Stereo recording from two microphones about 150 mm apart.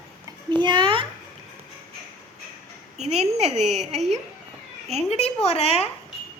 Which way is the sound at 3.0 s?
45° right (ahead or behind).